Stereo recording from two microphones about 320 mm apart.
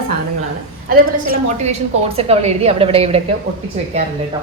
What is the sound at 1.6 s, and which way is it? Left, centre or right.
A woman's voice, centre.